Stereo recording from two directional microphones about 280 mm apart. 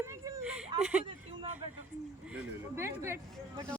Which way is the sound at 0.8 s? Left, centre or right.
Centre.